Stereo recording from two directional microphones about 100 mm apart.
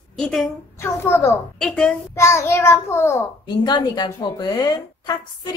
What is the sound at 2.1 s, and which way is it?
A child's voice, 25° left (ahead or behind).